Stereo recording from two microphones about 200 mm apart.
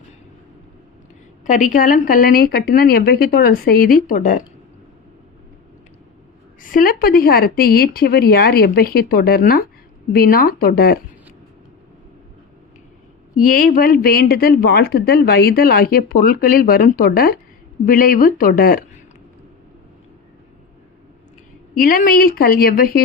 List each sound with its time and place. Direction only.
1.5 s a woman's voice: 40° left (ahead or behind)
6.6 s a woman's voice: 45° left (ahead or behind)
13.4 s a woman's voice: 45° left (ahead or behind)
21.8 s a woman's voice: 45° left (ahead or behind)